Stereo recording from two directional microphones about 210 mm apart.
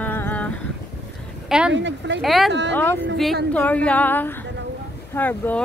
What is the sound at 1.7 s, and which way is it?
Speech, 60° right (ahead or behind).